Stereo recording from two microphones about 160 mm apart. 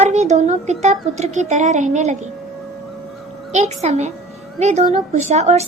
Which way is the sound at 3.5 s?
45° right (ahead or behind).